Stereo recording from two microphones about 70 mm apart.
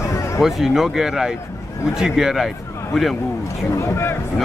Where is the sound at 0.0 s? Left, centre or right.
Left.